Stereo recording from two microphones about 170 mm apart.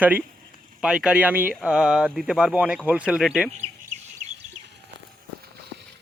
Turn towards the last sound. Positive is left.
turn(degrees=-45)  # may be behind; listen again after turning